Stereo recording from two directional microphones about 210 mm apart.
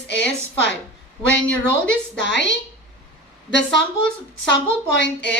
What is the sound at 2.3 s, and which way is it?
Speech, 55° left (ahead or behind).